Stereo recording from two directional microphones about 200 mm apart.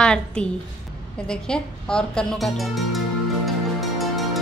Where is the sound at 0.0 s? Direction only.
5° left (ahead or behind).